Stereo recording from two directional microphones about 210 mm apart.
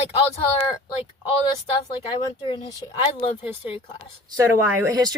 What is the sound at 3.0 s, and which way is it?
Speech, 25° left (ahead or behind).